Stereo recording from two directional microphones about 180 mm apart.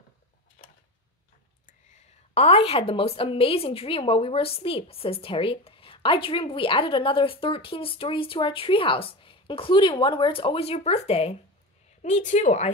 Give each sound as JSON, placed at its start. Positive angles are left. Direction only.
{"t": 1.7, "sound": "a woman's voice", "side_deg": 40}